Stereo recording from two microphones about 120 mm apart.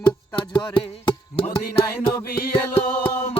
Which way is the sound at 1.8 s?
30° left (ahead or behind).